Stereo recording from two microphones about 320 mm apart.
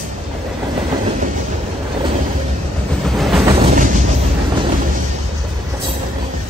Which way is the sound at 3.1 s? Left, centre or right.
Centre.